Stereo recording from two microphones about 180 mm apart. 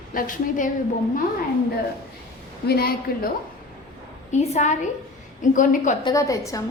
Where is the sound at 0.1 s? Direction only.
50° left (ahead or behind).